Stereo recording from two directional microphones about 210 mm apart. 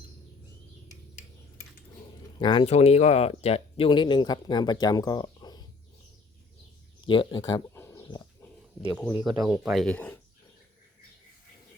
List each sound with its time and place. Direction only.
2.4 s speech: 20° left (ahead or behind)
7.0 s speech: 25° left (ahead or behind)
7.7 s livestock: 10° left (ahead or behind)
9.2 s speech: 15° right (ahead or behind)
9.8 s speech: 5° left (ahead or behind)